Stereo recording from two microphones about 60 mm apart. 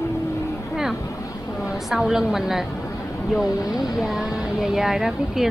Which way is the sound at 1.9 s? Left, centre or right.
Centre.